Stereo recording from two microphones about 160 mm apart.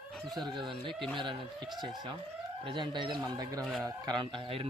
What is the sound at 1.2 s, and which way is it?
Speech, 30° right (ahead or behind).